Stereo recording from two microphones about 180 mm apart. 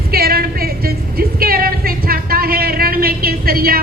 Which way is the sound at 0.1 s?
55° right (ahead or behind).